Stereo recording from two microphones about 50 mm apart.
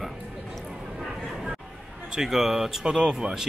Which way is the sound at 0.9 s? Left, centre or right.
Centre.